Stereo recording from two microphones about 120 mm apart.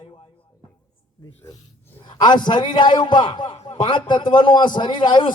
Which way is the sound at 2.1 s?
40° left (ahead or behind).